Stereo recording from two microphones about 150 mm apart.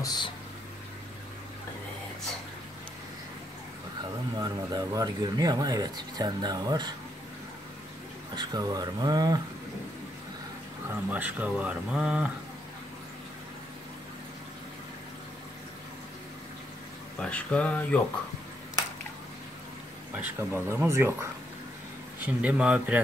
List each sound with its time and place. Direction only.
0.0 s speech: 25° left (ahead or behind)
4.4 s speech: 25° right (ahead or behind)
8.4 s speech: 25° right (ahead or behind)
11.1 s speech: 10° right (ahead or behind)
17.2 s speech: 10° left (ahead or behind)
20.2 s speech: 15° right (ahead or behind)